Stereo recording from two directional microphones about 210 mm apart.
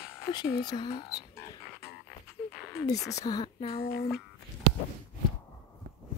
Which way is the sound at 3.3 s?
25° left (ahead or behind).